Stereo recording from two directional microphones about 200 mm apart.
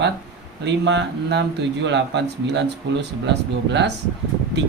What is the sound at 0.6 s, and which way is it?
Speech, 60° right (ahead or behind).